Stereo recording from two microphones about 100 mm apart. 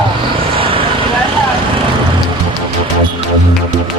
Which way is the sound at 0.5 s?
65° right (ahead or behind).